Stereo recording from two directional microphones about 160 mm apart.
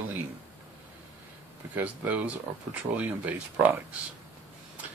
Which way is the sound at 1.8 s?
10° right (ahead or behind).